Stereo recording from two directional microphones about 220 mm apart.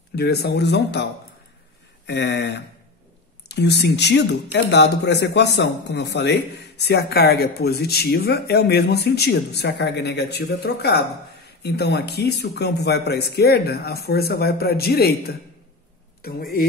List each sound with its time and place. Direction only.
0.1 s speech: 45° left (ahead or behind)
2.0 s speech: 50° left (ahead or behind)